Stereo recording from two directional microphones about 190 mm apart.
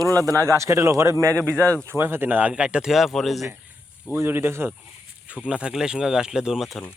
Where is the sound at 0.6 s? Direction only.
15° right (ahead or behind).